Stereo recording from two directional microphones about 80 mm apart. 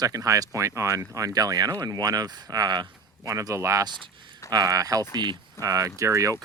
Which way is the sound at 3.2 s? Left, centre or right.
Right.